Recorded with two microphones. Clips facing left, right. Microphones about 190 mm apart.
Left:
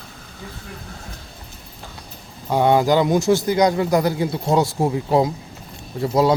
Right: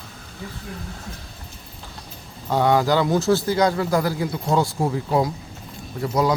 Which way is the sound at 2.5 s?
15° left (ahead or behind).